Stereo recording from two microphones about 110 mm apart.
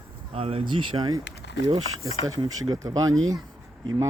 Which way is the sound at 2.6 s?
35° right (ahead or behind).